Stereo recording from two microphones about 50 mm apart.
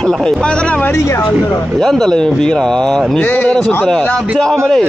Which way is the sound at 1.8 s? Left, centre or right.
Centre.